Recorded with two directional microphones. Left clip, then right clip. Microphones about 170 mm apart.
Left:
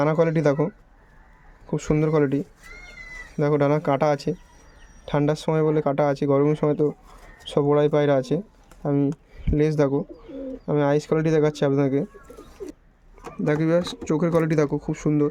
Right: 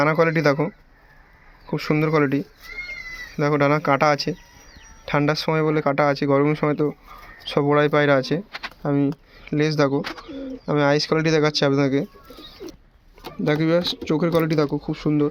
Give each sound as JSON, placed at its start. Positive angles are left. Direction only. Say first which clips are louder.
{"t": 0.0, "sound": "speech", "louder": "right 2 dB", "side_deg": 15}
{"t": 1.7, "sound": "speech", "louder": "right 1 dB", "side_deg": 15}
{"t": 13.5, "sound": "speech", "louder": "right 2 dB", "side_deg": 10}